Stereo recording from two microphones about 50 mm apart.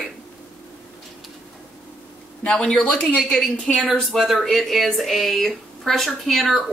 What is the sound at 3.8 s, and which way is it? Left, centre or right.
Speech, centre.